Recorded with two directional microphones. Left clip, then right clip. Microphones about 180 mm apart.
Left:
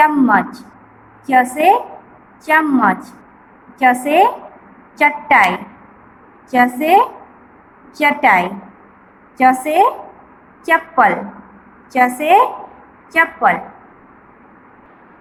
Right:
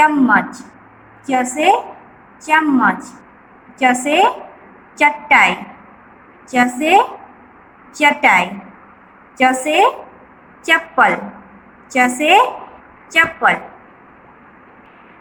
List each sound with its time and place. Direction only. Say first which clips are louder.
0.0 s a woman's voice: even; 20° left (ahead or behind)